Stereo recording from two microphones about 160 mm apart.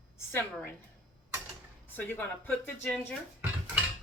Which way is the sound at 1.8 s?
10° left (ahead or behind).